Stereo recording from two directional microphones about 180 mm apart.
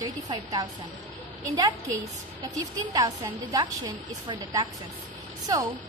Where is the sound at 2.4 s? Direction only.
20° right (ahead or behind).